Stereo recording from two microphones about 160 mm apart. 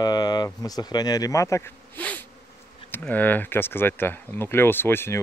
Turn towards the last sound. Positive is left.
turn(degrees=15)  # may be behind; listen again after turning